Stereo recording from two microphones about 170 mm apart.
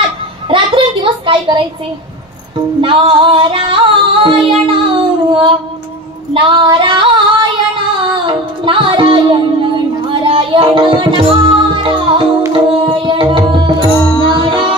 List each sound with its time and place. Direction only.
0.5 s a sound: 30° right (ahead or behind)
2.8 s music: 30° right (ahead or behind)
6.3 s female singing: 30° right (ahead or behind)
13.9 s music: 20° left (ahead or behind)